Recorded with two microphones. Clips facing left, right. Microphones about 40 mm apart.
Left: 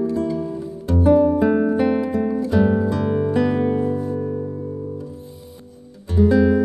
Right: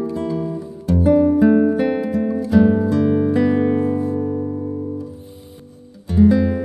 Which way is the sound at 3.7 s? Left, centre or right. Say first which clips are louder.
Right 3 dB; centre.